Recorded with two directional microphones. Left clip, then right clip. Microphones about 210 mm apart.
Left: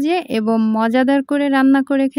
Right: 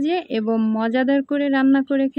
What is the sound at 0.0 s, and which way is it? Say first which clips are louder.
Speech: left 4 dB; 50° left (ahead or behind).